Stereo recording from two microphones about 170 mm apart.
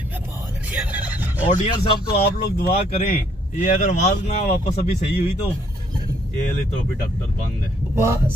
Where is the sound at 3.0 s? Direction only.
45° left (ahead or behind).